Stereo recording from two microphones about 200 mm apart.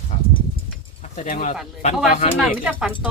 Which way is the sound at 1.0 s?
40° left (ahead or behind).